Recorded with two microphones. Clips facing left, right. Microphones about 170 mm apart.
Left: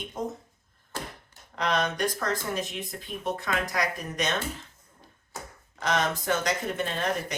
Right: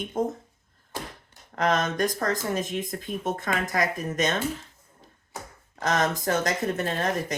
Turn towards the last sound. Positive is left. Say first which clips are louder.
# right 3 dB
turn(degrees=-45)  # may be behind; listen again after turning